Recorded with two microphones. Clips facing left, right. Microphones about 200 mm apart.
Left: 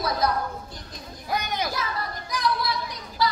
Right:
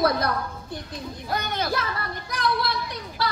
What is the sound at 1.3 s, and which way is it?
Speech, 15° left (ahead or behind).